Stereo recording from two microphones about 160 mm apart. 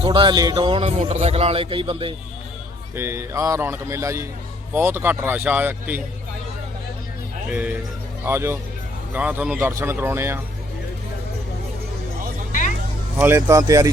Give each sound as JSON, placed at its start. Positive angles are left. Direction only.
{"t": 0.0, "sound": "speech", "side_deg": -30}
{"t": 2.9, "sound": "a man's voice", "side_deg": -15}
{"t": 7.5, "sound": "a man's voice", "side_deg": -10}
{"t": 12.5, "sound": "music", "side_deg": 55}
{"t": 13.1, "sound": "speech", "side_deg": -15}